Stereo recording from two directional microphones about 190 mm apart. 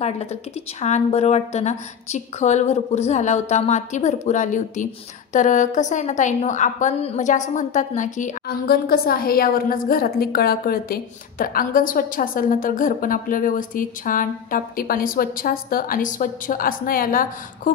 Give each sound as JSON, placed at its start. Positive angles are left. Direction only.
{"t": 0.0, "sound": "a woman's voice", "side_deg": 35}